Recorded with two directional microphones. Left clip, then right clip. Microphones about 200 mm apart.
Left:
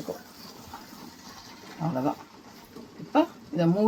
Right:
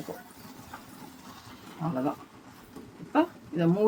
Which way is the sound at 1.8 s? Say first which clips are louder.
Left 2 dB; 35° left (ahead or behind).